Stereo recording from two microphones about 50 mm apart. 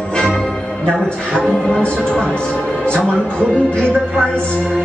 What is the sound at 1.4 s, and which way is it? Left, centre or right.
Music, centre.